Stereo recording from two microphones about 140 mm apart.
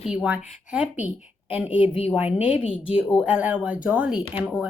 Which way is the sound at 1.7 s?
40° left (ahead or behind).